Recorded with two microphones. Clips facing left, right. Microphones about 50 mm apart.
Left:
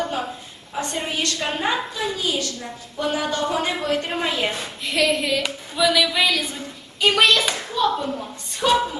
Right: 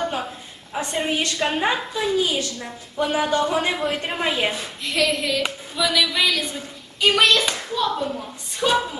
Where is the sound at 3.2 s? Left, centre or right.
Centre.